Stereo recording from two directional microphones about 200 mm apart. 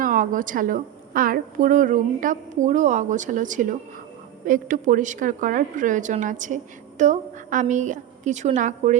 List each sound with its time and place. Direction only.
0.0 s a woman's voice: 40° right (ahead or behind)